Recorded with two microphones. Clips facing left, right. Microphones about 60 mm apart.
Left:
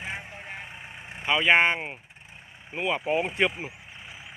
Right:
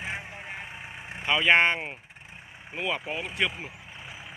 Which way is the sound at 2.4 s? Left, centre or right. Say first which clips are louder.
Right 2 dB; centre.